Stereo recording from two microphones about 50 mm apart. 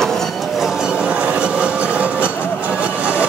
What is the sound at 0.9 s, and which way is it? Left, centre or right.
Train, right.